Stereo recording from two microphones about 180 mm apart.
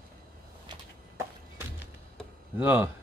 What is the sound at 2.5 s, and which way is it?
Speech, 10° right (ahead or behind).